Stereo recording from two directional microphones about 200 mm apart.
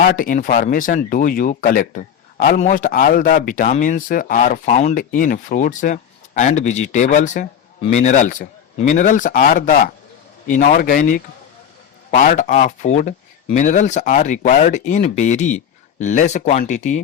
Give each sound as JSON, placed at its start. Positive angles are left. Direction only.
{"t": 0.0, "sound": "speech", "side_deg": 45}